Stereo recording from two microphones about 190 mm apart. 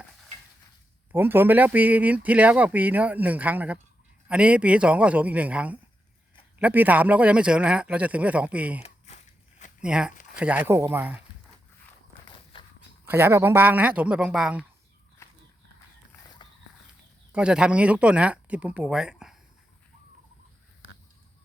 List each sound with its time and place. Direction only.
1.1 s speech: 10° right (ahead or behind)
9.8 s speech: 5° right (ahead or behind)
12.5 s a sound: 25° left (ahead or behind)
13.1 s speech: 10° right (ahead or behind)
15.2 s horse: 15° left (ahead or behind)
17.3 s speech: 5° right (ahead or behind)